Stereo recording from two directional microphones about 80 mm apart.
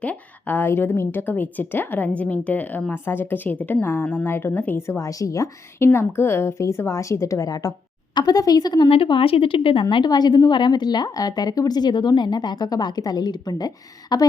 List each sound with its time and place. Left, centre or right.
0.0 s a woman's voice: left
4.9 s a woman's voice: left
9.9 s speech: left